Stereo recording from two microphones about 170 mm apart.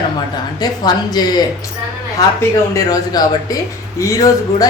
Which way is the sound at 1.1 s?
25° left (ahead or behind).